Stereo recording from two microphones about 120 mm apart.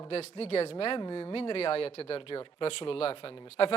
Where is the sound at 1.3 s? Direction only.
55° left (ahead or behind).